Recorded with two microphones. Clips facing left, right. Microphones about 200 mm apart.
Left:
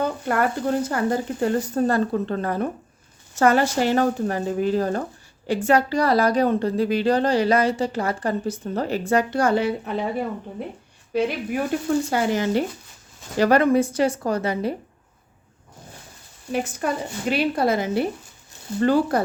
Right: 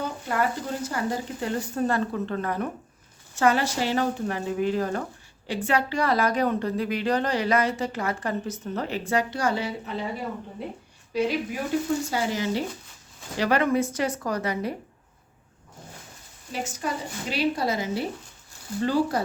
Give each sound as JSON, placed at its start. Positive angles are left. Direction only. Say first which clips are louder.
{"t": 0.0, "sound": "speech", "louder": "left 5 dB", "side_deg": 60}
{"t": 3.3, "sound": "a woman's voice", "louder": "left 4 dB", "side_deg": 50}
{"t": 11.1, "sound": "speech", "louder": "left 3 dB", "side_deg": 55}
{"t": 13.4, "sound": "a woman's voice", "louder": "left 6 dB", "side_deg": 40}
{"t": 16.5, "sound": "speech", "louder": "left 6 dB", "side_deg": 55}